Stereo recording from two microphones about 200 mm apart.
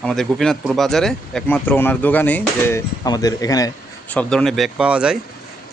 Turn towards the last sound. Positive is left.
turn(degrees=-5)  # may be behind; listen again after turning